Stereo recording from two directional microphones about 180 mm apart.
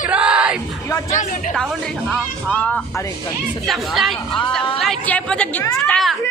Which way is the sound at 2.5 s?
5° left (ahead or behind).